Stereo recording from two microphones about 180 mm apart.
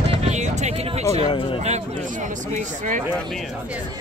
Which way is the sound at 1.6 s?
40° right (ahead or behind).